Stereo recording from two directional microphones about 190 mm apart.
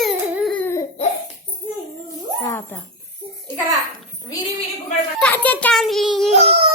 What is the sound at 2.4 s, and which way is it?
Jingle bell, 15° left (ahead or behind).